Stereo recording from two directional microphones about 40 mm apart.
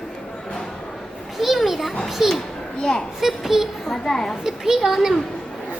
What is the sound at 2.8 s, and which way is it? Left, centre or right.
Speech, centre.